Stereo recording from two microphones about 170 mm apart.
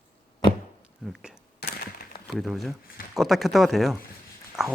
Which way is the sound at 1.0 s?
Centre (ahead or behind).